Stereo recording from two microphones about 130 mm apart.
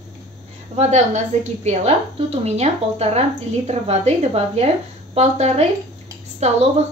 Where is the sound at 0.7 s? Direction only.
60° right (ahead or behind).